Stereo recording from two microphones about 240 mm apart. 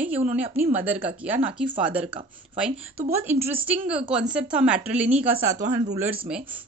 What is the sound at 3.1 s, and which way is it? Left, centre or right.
A woman's voice, centre.